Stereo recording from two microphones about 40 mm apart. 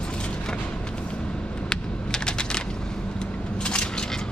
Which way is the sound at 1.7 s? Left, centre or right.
Left.